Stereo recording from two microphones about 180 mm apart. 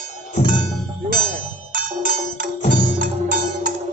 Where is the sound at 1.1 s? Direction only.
50° right (ahead or behind).